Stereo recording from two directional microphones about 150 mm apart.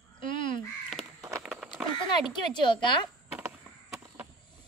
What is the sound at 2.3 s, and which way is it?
Speech, 30° left (ahead or behind).